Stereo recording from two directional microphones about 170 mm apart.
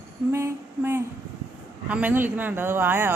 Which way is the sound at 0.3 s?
15° right (ahead or behind).